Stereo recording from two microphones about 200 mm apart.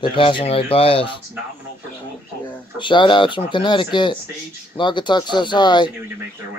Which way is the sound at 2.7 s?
25° left (ahead or behind).